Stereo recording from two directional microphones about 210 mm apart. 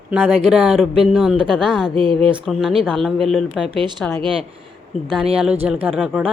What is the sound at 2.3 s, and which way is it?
A woman's voice, centre (ahead or behind).